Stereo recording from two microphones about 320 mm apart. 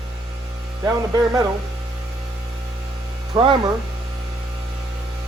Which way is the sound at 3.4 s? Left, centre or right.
Centre.